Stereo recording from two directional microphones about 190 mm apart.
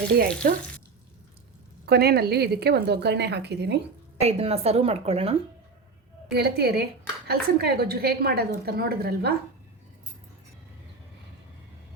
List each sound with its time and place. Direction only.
1.9 s a woman's voice: 55° right (ahead or behind)
4.2 s a woman's voice: 35° right (ahead or behind)
6.3 s a woman's voice: 55° right (ahead or behind)